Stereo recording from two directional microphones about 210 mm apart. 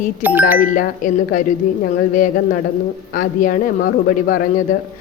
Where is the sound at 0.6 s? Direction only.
40° left (ahead or behind).